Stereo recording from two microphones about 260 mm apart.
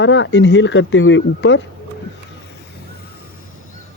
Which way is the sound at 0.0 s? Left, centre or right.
Left.